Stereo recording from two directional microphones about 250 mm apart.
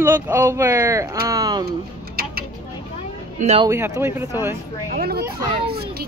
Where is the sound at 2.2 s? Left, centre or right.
Right.